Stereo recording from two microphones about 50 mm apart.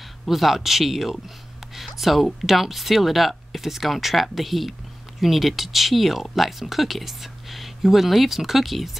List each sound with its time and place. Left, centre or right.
0.3 s speech: centre